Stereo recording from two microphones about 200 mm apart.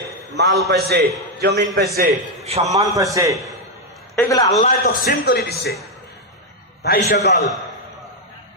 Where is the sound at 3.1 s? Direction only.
15° right (ahead or behind).